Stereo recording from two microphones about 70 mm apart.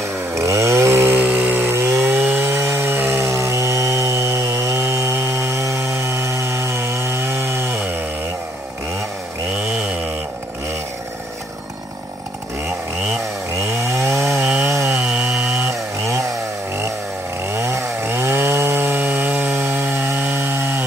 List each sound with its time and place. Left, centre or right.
0.3 s chainsaw: right
13.6 s chainsaw: right
15.0 s chainsaw: centre
17.6 s chainsaw: right